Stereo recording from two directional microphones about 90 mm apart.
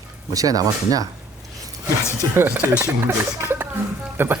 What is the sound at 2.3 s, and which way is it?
Speech, 20° right (ahead or behind).